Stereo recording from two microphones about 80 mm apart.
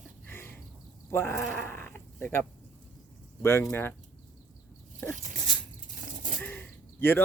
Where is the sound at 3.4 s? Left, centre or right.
Left.